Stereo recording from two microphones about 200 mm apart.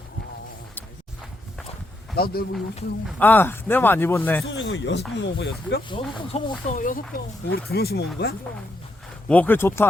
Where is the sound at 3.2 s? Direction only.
10° left (ahead or behind).